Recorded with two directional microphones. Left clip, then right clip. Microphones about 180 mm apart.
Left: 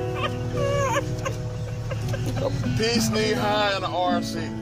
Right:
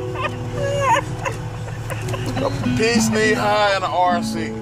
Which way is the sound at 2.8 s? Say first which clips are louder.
Right 6 dB; 15° left (ahead or behind).